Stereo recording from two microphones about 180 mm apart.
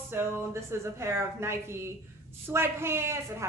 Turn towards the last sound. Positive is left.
turn(degrees=-15)  # may be behind; listen again after turning